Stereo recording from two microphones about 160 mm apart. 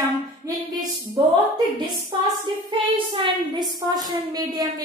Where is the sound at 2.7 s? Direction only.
30° right (ahead or behind).